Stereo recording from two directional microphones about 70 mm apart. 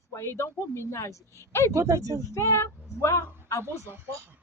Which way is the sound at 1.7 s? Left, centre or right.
Right.